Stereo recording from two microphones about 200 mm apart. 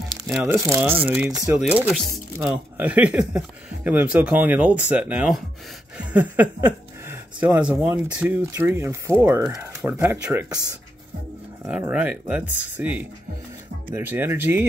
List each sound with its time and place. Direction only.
0.3 s speech: 10° right (ahead or behind)
1.6 s speech: 5° right (ahead or behind)
11.6 s speech: 10° right (ahead or behind)